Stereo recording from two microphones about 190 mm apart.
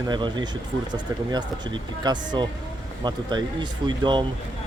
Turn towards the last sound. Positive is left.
turn(degrees=-25)  # may be behind; listen again after turning